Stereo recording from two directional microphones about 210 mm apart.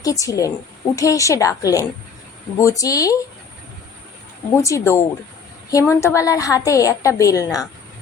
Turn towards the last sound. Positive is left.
turn(degrees=15)  # may be behind; listen again after turning